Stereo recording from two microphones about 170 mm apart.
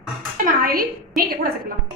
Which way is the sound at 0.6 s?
60° right (ahead or behind).